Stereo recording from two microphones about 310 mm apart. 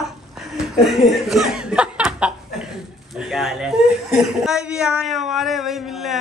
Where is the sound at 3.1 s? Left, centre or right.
Centre.